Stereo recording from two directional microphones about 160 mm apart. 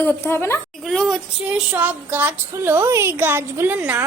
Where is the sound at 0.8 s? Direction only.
Centre (ahead or behind).